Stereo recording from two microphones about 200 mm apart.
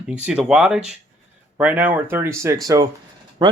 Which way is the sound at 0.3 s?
5° right (ahead or behind).